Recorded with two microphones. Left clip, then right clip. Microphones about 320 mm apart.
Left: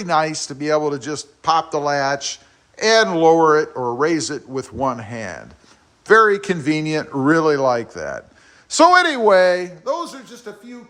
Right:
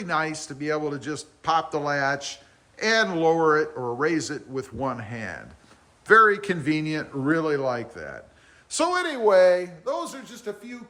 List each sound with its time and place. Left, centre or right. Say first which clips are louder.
0.0 s a man's voice: left 8 dB; centre